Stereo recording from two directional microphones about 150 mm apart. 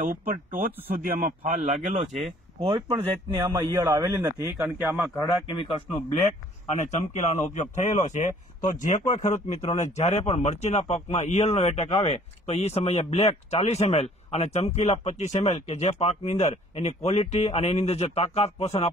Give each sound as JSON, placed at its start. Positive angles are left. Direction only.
{"t": 0.0, "sound": "speech", "side_deg": -65}
{"t": 2.9, "sound": "a man's voice", "side_deg": -15}
{"t": 4.6, "sound": "a man's voice", "side_deg": -5}
{"t": 5.6, "sound": "a man's voice", "side_deg": 35}
{"t": 6.8, "sound": "a man's voice", "side_deg": 50}